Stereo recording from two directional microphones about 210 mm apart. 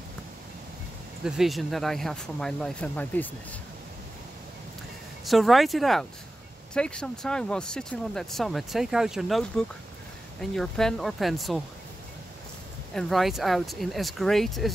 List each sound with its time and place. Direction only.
1.2 s speech: centre (ahead or behind)
5.2 s speech: centre (ahead or behind)
12.9 s speech: centre (ahead or behind)